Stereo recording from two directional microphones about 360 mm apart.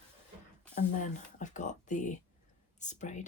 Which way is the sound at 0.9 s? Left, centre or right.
Left.